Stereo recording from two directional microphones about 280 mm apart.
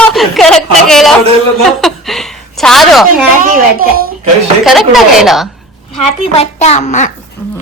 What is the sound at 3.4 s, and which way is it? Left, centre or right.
Speech, right.